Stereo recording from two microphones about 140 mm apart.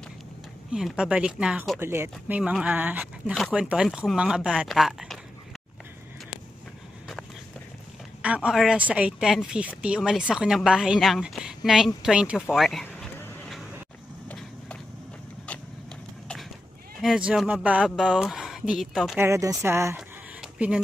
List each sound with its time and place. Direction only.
0.7 s a woman's voice: 5° right (ahead or behind)
8.2 s a woman's voice: 10° right (ahead or behind)
12.8 s vehicle: 10° left (ahead or behind)
17.0 s a woman's voice: 5° right (ahead or behind)
19.1 s speech: 20° right (ahead or behind)
20.0 s a sound: 5° right (ahead or behind)